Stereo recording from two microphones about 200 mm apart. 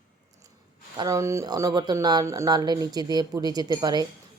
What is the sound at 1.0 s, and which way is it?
Speech, 15° right (ahead or behind).